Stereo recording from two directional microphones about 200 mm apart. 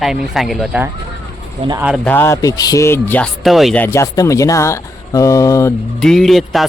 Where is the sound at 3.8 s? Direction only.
15° left (ahead or behind).